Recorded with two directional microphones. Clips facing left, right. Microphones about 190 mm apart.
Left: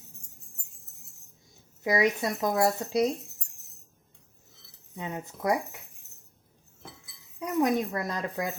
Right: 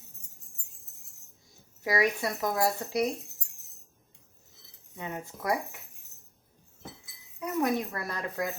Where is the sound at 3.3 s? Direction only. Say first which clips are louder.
Left 1 dB; centre (ahead or behind).